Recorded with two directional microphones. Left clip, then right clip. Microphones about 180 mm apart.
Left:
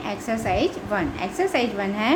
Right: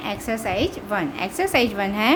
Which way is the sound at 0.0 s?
25° right (ahead or behind).